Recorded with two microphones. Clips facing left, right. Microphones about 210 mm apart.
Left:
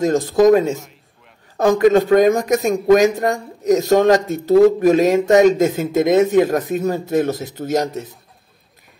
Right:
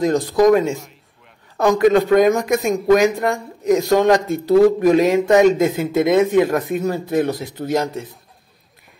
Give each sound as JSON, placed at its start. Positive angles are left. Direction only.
{"t": 0.0, "sound": "speech", "side_deg": 45}